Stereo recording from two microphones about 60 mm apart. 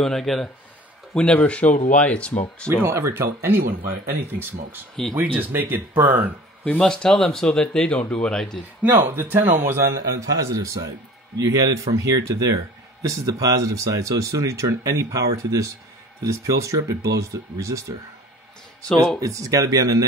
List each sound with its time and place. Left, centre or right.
0.0 s speech: centre
1.4 s speech: left
2.7 s speech: right
6.8 s speech: centre
8.8 s speech: right
10.2 s speech: right
19.2 s speech: right